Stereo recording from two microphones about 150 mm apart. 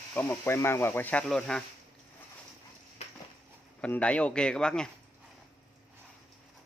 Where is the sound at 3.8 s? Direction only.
10° left (ahead or behind).